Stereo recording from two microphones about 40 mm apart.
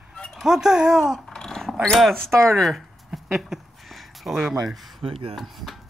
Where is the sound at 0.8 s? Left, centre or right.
Centre.